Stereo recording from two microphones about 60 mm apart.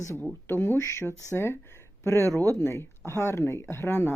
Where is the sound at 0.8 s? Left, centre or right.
Left.